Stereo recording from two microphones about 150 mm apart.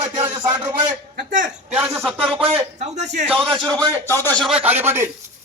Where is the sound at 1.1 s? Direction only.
65° right (ahead or behind).